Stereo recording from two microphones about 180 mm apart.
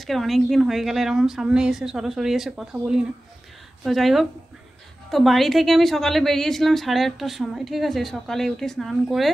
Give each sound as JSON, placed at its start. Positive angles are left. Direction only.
{"t": 0.0, "sound": "a woman's voice", "side_deg": 0}